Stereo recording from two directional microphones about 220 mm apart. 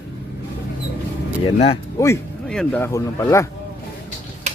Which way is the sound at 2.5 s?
5° left (ahead or behind).